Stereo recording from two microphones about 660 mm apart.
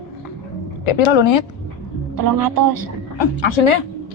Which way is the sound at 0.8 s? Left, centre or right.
Left.